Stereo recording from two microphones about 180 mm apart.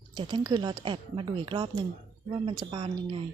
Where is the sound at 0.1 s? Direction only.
25° right (ahead or behind).